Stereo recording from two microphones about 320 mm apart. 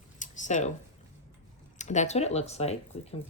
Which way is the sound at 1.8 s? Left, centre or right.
Left.